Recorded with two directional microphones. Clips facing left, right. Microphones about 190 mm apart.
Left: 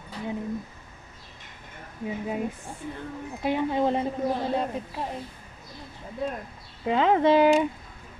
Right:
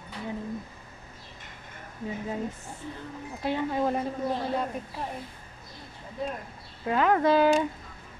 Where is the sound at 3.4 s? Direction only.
20° left (ahead or behind).